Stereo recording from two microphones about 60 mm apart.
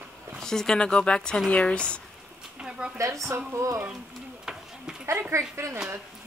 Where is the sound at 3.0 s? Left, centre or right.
Right.